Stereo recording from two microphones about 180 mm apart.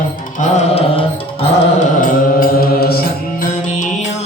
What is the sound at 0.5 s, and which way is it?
Music, 35° left (ahead or behind).